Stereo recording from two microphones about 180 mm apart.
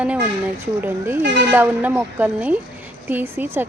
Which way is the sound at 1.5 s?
10° right (ahead or behind).